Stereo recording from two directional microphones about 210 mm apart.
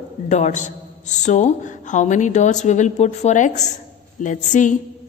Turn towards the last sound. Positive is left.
turn(degrees=35)  # may be behind; listen again after turning